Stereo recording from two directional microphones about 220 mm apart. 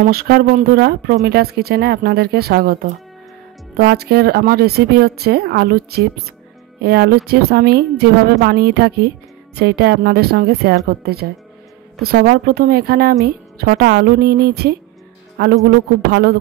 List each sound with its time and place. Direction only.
0.0 s speech: 45° right (ahead or behind)